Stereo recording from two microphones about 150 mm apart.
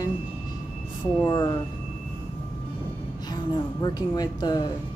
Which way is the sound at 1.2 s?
30° left (ahead or behind).